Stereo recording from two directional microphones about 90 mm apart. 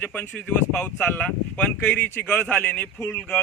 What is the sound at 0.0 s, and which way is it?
Speech, 20° left (ahead or behind).